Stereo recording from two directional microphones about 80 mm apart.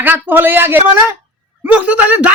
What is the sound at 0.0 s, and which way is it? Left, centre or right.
Speech, right.